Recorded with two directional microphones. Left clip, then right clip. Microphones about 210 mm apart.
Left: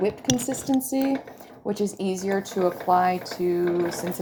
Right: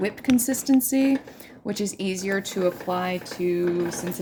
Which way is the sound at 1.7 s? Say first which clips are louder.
Left 2 dB; 55° right (ahead or behind).